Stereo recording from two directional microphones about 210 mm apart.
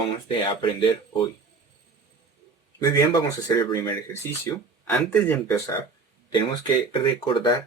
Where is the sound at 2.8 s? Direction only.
15° left (ahead or behind).